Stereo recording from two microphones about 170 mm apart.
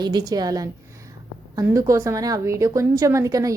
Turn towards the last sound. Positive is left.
turn(degrees=-20)  # may be behind; listen again after turning